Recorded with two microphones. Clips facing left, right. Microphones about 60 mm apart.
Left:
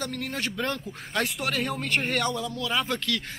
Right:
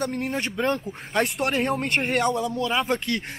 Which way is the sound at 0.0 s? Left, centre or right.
Right.